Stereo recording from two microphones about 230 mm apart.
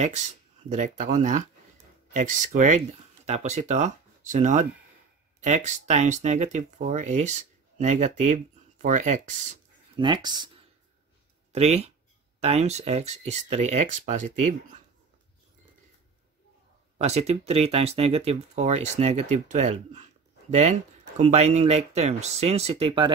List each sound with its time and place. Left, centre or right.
0.7 s speech: right
9.9 s speech: centre
11.5 s speech: right
17.0 s speech: right